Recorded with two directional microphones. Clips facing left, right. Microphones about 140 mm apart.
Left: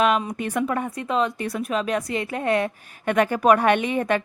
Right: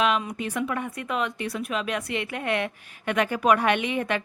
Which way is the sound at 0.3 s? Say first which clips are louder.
Left 4 dB; 50° left (ahead or behind).